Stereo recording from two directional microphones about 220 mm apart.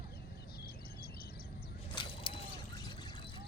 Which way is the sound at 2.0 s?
25° left (ahead or behind).